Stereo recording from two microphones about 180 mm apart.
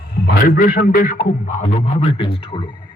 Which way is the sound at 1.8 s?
35° left (ahead or behind).